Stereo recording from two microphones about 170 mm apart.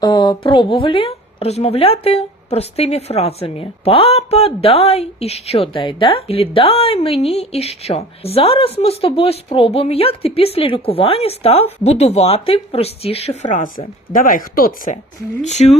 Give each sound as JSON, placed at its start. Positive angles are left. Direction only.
{"t": 0.0, "sound": "a woman's voice", "side_deg": 25}
{"t": 15.4, "sound": "a woman's voice", "side_deg": 40}